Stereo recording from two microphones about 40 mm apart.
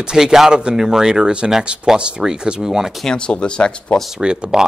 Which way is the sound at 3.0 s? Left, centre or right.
Left.